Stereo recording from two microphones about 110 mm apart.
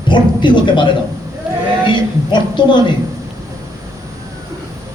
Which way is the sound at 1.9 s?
45° left (ahead or behind).